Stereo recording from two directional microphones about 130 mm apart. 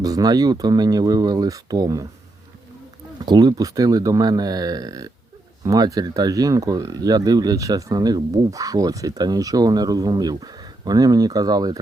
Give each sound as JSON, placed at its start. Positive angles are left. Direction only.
{"t": 0.0, "sound": "speech", "side_deg": -30}
{"t": 3.2, "sound": "speech", "side_deg": -35}